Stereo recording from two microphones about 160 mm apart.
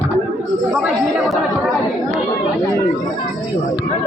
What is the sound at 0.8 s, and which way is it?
Speech, centre (ahead or behind).